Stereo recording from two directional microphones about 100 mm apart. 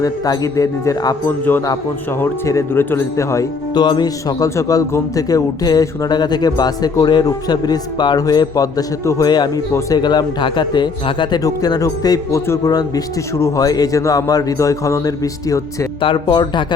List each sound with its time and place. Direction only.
0.0 s a man's voice: 35° left (ahead or behind)
2.2 s speech: 25° left (ahead or behind)
3.8 s a man's voice: 45° left (ahead or behind)
11.4 s a man's voice: 35° left (ahead or behind)
16.0 s a man's voice: 60° left (ahead or behind)